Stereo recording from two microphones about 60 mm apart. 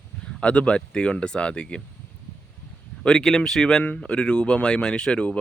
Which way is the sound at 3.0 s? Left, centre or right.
Centre.